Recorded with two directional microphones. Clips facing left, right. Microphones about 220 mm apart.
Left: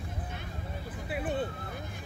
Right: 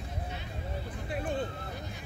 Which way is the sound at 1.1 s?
5° left (ahead or behind).